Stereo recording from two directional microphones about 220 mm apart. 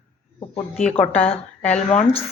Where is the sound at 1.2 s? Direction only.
30° left (ahead or behind).